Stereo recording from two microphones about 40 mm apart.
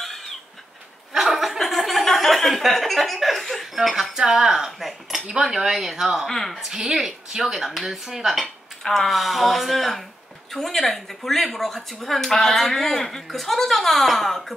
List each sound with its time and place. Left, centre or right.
1.1 s chuckle: centre
3.7 s speech: centre
6.2 s speech: centre
6.5 s speech: centre
8.8 s speech: centre